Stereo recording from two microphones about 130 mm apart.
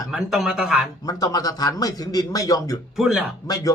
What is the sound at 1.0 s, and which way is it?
A man's voice, 30° left (ahead or behind).